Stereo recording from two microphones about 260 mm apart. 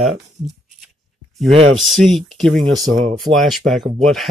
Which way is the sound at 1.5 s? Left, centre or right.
Right.